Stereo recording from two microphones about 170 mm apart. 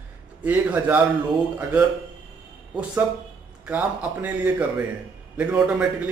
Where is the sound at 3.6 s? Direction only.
10° right (ahead or behind).